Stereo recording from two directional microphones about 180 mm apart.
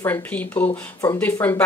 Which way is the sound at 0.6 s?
25° left (ahead or behind).